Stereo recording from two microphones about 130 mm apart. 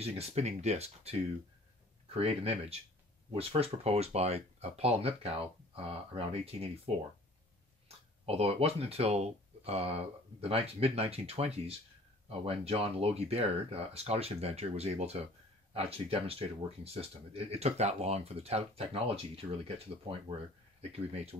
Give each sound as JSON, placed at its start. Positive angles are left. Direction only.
{"t": 0.0, "sound": "speech", "side_deg": -50}
{"t": 8.3, "sound": "speech", "side_deg": -50}
{"t": 21.1, "sound": "speech", "side_deg": -55}